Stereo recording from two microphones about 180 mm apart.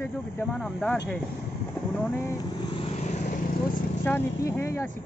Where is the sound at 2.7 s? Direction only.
35° left (ahead or behind).